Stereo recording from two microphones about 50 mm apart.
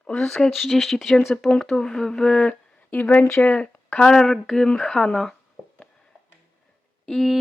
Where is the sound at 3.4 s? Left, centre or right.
Left.